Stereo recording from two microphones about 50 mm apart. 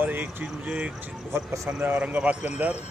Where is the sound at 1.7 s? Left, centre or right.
Right.